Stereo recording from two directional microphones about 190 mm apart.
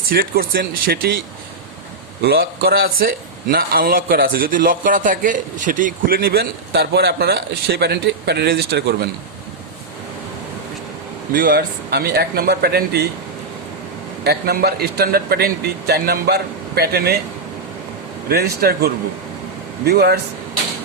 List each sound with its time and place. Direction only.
0.1 s a man's voice: 50° right (ahead or behind)
2.2 s a man's voice: 55° right (ahead or behind)
11.3 s a man's voice: 50° right (ahead or behind)
14.3 s a man's voice: 55° right (ahead or behind)
18.3 s a man's voice: 55° right (ahead or behind)